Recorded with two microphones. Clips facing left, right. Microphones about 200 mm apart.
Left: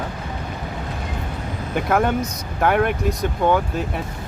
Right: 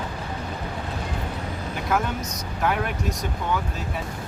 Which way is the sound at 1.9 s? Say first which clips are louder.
Left 6 dB; 60° left (ahead or behind).